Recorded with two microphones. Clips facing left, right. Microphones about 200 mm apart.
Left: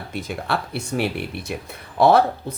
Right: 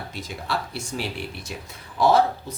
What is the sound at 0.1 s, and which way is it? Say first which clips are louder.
Speech: left 6 dB; 55° left (ahead or behind).